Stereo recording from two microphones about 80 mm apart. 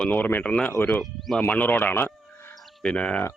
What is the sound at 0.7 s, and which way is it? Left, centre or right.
Speech, left.